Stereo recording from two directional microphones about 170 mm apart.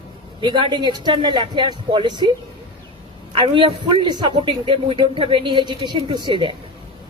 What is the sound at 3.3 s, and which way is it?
A man's voice, 30° right (ahead or behind).